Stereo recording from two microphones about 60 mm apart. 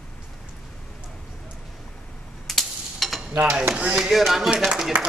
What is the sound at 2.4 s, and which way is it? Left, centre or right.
Stir, centre.